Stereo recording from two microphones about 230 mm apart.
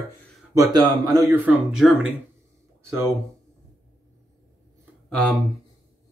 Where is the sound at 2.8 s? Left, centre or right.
Centre.